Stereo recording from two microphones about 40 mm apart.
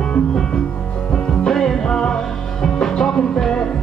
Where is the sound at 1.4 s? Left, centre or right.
Centre.